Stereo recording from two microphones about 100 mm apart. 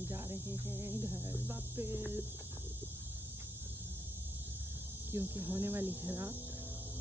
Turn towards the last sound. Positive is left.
turn(degrees=-20)  # may be behind; listen again after turning